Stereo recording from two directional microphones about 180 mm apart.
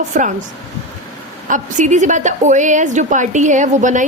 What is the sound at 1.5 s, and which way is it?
A woman's voice, 45° right (ahead or behind).